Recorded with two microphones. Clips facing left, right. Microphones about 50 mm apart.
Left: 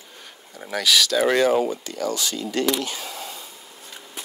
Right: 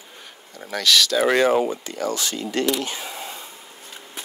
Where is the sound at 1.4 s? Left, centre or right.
Right.